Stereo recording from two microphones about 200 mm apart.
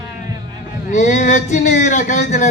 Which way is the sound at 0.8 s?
35° left (ahead or behind).